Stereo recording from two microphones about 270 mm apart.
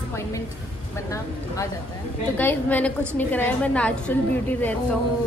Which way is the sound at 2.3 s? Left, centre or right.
Centre.